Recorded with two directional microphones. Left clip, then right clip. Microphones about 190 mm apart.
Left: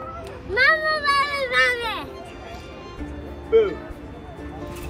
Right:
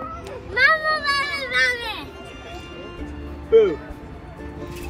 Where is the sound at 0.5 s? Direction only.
55° left (ahead or behind).